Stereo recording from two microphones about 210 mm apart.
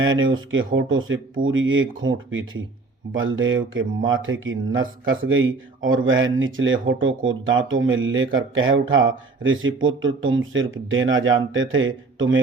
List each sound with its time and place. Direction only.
0.0 s speech: 70° right (ahead or behind)